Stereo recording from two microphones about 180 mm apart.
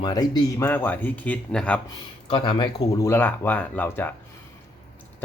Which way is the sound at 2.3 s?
25° left (ahead or behind).